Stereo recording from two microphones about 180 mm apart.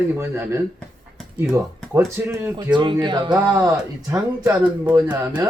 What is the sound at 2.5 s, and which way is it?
Speech, 25° right (ahead or behind).